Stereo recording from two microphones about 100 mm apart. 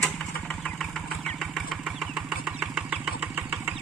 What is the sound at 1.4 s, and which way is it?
Vehicle, centre (ahead or behind).